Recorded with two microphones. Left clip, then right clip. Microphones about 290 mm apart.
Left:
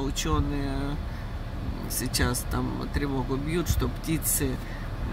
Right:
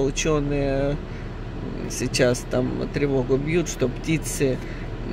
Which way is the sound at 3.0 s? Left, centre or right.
Centre.